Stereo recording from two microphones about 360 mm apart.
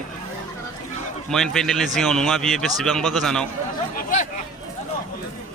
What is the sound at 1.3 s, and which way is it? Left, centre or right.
A man's voice, centre.